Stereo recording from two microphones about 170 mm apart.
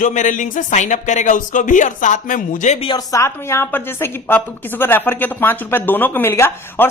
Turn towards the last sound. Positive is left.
turn(degrees=15)  # may be behind; listen again after turning